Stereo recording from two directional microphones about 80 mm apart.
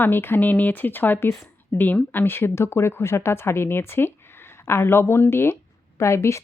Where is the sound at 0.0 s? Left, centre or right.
Left.